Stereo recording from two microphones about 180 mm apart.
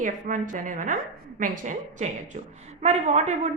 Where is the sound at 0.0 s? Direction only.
45° right (ahead or behind).